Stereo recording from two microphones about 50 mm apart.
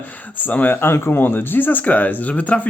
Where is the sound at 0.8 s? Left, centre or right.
Left.